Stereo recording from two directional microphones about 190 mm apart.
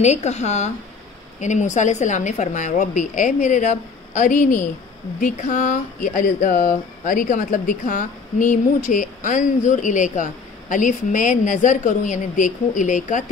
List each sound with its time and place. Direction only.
0.0 s speech: 35° left (ahead or behind)